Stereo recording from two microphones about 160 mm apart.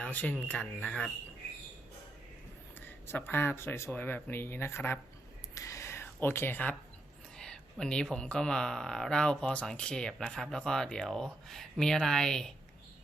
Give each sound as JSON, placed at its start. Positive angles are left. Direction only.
{"t": 0.0, "sound": "speech", "side_deg": 10}
{"t": 2.7, "sound": "speech", "side_deg": 10}
{"t": 5.5, "sound": "a sound", "side_deg": 20}
{"t": 8.1, "sound": "speech", "side_deg": 5}